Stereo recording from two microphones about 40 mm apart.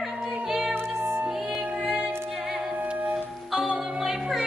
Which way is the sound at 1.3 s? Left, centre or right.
Centre.